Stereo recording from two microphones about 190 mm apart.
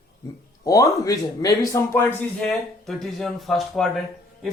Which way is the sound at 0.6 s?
20° left (ahead or behind).